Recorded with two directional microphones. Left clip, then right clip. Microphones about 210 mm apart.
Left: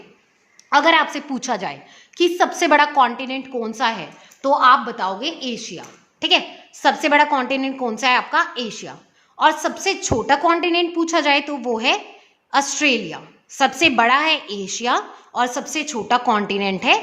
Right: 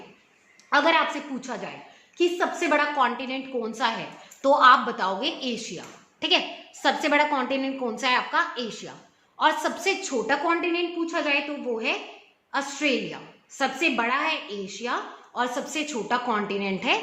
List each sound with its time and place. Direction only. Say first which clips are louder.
0.7 s a woman's voice: left 6 dB; 25° left (ahead or behind)
1.4 s a woman's voice: left 10 dB; 45° left (ahead or behind); by 4.0 s 30° left (ahead or behind)
4.4 s a woman's voice: left 3 dB; 20° left (ahead or behind); by 17.0 s 35° left (ahead or behind)